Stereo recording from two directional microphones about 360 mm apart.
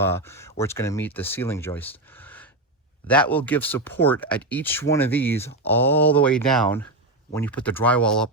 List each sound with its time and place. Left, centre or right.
0.0 s speech: centre